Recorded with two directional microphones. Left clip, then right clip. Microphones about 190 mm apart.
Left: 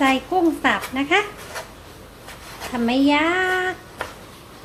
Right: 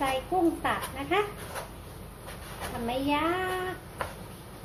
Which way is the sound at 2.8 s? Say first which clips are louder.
Left 10 dB; 65° left (ahead or behind).